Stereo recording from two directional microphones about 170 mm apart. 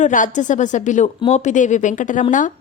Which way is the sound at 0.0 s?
50° left (ahead or behind).